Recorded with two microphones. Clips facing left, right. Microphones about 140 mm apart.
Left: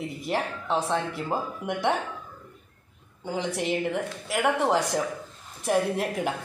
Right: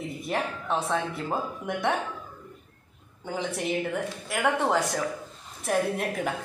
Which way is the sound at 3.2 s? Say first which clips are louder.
Left 2 dB; 15° left (ahead or behind).